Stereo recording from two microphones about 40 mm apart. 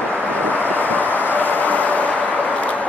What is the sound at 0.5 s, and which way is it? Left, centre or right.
Vehicle, left.